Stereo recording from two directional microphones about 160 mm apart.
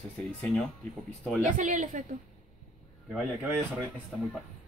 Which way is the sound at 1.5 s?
55° right (ahead or behind).